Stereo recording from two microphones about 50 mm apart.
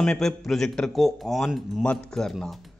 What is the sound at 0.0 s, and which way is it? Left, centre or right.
A man's voice, centre.